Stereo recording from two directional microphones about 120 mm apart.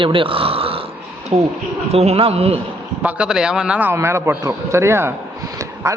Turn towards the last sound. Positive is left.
turn(degrees=-25)  # may be behind; listen again after turning